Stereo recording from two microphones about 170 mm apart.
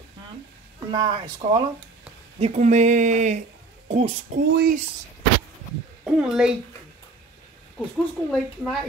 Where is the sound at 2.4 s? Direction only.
45° right (ahead or behind).